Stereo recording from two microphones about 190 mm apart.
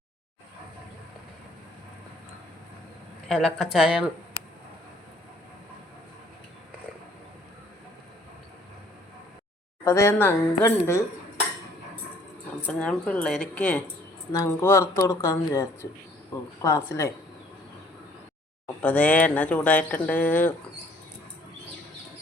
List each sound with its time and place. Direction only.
3.2 s speech: centre (ahead or behind)
9.8 s speech: 15° left (ahead or behind)
12.6 s speech: 5° left (ahead or behind)
18.8 s speech: 5° left (ahead or behind)